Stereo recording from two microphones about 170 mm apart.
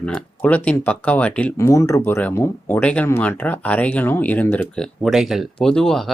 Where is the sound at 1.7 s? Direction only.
20° left (ahead or behind); by 6.1 s centre (ahead or behind).